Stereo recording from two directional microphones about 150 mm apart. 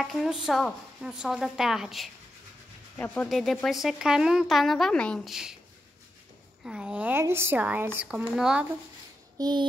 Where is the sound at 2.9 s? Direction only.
10° left (ahead or behind).